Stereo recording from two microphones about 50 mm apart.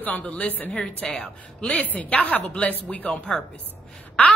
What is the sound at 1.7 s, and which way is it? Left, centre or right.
A woman's voice, left.